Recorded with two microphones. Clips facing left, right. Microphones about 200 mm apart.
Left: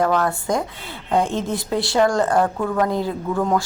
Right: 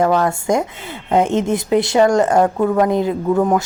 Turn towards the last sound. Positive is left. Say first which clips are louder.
# right 5 dB
turn(degrees=-20)  # may be behind; listen again after turning